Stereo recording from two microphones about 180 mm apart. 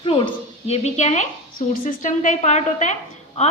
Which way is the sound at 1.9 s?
45° left (ahead or behind).